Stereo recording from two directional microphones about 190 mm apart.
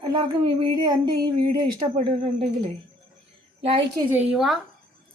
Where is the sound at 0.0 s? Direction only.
20° right (ahead or behind).